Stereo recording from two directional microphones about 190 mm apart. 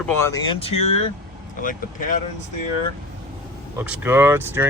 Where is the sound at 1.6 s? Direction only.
45° left (ahead or behind).